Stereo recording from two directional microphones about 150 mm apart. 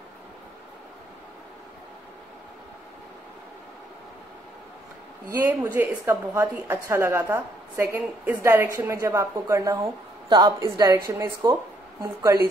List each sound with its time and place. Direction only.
5.3 s a woman's voice: 15° right (ahead or behind)